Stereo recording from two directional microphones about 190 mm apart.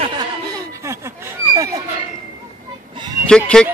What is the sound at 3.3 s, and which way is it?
Speech, 5° left (ahead or behind).